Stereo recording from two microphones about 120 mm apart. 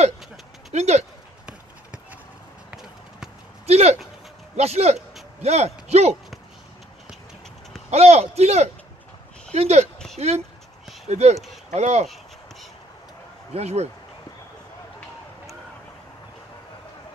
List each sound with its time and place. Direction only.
0.7 s speech: 65° right (ahead or behind)
2.7 s basketball bounce: 5° right (ahead or behind)
3.6 s speech: 65° right (ahead or behind)
7.9 s speech: 60° right (ahead or behind)
13.5 s speech: 65° right (ahead or behind)